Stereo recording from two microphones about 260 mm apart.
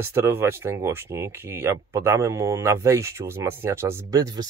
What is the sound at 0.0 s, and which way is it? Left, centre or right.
Speech, centre.